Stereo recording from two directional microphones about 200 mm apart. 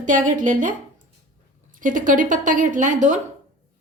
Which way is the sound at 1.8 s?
40° right (ahead or behind).